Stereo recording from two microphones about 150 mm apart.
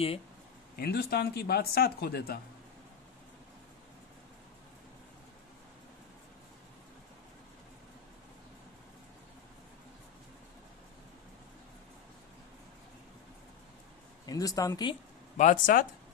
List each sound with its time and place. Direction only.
0.7 s speech: 90° left
14.2 s speech: 25° left (ahead or behind)
15.3 s speech: 60° left (ahead or behind)